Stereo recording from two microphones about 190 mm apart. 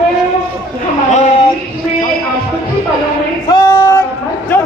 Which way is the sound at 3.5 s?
20° left (ahead or behind).